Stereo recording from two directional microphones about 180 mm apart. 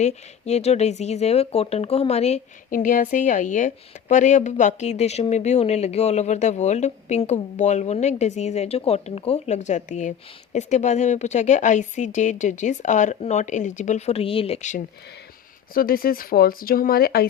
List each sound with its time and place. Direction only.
0.0 s speech: 35° left (ahead or behind)
2.6 s speech: 50° left (ahead or behind)
15.7 s speech: 55° left (ahead or behind)